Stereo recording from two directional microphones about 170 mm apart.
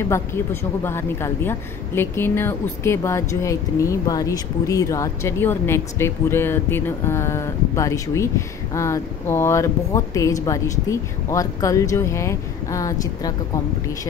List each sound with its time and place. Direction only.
0.1 s a woman's voice: 15° left (ahead or behind)